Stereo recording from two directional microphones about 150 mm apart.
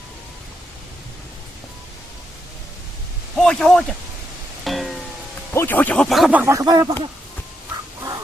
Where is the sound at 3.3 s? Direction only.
5° left (ahead or behind).